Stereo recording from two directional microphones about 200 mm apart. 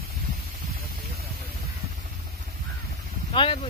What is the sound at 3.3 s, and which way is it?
Speech, 25° left (ahead or behind).